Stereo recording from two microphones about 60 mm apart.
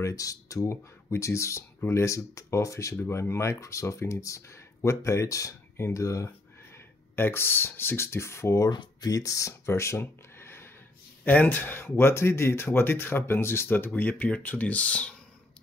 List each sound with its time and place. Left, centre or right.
0.0 s speech: left
1.1 s speech: left
6.7 s speech: left
9.0 s speech: left
11.2 s speech: left